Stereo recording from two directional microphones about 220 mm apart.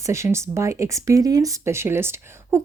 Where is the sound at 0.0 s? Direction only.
15° right (ahead or behind).